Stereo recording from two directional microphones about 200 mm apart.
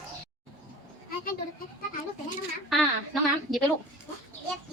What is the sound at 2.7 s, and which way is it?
Speech, centre (ahead or behind).